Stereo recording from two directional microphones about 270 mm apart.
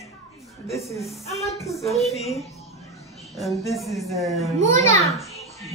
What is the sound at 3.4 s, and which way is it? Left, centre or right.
Speech, centre.